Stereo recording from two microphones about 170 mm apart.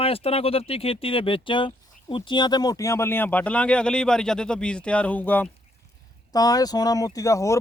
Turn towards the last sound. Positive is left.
turn(degrees=20)  # may be behind; listen again after turning